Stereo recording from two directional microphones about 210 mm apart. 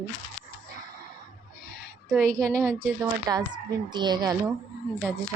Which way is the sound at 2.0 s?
5° left (ahead or behind).